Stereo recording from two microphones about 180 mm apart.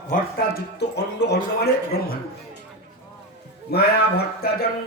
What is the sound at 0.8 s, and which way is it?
Speech, 70° left (ahead or behind).